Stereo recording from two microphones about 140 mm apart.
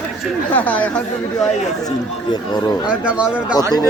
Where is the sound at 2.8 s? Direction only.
10° right (ahead or behind).